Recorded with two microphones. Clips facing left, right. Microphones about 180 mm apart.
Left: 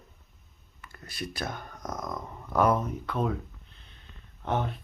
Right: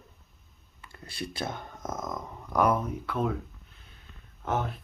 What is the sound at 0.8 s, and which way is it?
Speech, 25° right (ahead or behind).